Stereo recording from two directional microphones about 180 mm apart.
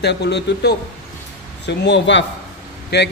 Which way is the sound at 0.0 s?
70° left (ahead or behind).